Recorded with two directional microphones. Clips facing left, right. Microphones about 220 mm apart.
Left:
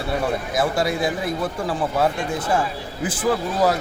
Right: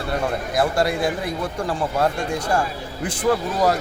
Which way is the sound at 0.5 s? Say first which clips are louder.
Right 2 dB; centre (ahead or behind).